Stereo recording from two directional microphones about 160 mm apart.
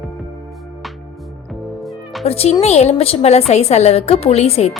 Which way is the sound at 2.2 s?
40° left (ahead or behind).